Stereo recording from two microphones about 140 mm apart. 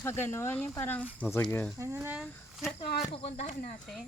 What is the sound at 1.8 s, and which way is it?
Speech, 20° right (ahead or behind).